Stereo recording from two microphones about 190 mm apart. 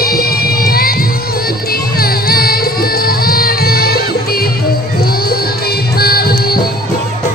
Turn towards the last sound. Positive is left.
turn(degrees=50)  # may be behind; listen again after turning